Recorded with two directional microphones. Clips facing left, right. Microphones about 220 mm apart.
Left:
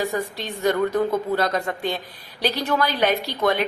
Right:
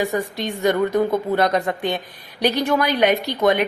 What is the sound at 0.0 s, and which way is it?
A woman's voice, 15° right (ahead or behind).